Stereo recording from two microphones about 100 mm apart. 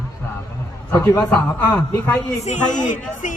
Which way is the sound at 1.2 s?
15° left (ahead or behind).